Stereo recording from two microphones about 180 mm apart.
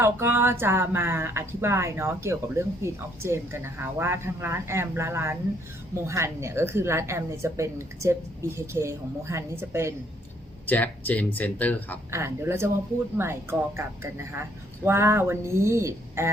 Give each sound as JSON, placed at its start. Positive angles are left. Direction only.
{"t": 0.0, "sound": "speech", "side_deg": -15}
{"t": 10.7, "sound": "speech", "side_deg": 10}
{"t": 12.1, "sound": "speech", "side_deg": -15}